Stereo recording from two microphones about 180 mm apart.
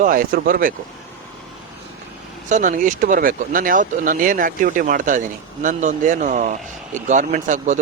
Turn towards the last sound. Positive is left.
turn(degrees=-45)  # may be behind; listen again after turning